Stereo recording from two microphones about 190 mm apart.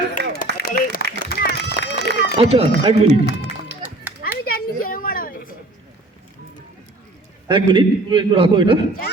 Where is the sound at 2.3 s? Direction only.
30° right (ahead or behind).